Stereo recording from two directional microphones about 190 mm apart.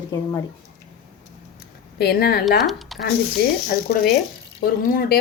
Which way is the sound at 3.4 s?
55° left (ahead or behind).